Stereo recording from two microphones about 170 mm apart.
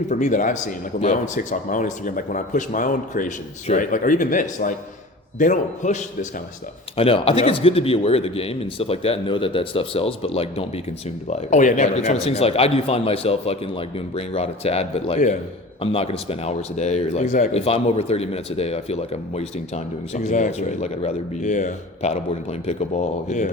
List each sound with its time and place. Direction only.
0.1 s speech: 45° left (ahead or behind)
6.9 s a man's voice: 35° left (ahead or behind)